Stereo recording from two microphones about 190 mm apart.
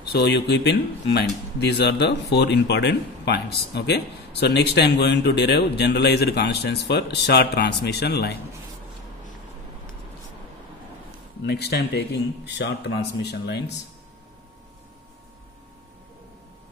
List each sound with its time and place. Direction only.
0.0 s speech: 60° left (ahead or behind)
11.4 s speech: 60° left (ahead or behind)